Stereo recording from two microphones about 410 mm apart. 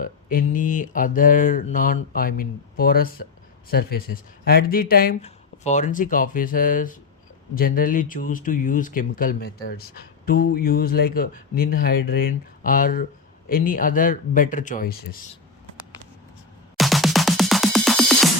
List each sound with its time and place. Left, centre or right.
0.0 s speech: left
16.7 s music: centre